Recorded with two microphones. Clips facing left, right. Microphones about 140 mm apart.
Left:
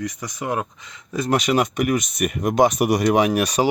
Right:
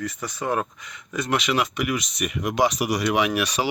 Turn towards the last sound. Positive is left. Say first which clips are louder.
# left 5 dB
turn(degrees=45)  # may be behind; listen again after turning